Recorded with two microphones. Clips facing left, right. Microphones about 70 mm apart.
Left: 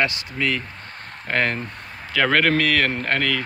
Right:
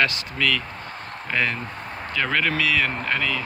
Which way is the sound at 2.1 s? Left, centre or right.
Left.